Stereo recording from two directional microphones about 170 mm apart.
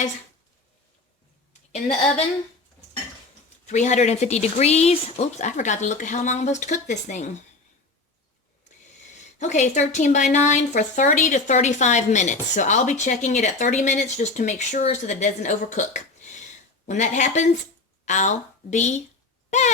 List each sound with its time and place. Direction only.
3.7 s a woman's voice: 45° left (ahead or behind)
9.4 s a woman's voice: 45° left (ahead or behind)